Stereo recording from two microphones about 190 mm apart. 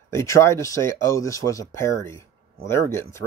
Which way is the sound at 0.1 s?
15° left (ahead or behind).